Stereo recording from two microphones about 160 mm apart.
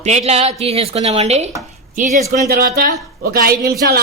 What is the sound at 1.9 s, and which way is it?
Speech, 55° right (ahead or behind).